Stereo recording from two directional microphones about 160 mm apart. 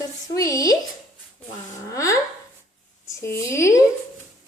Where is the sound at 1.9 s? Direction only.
20° left (ahead or behind).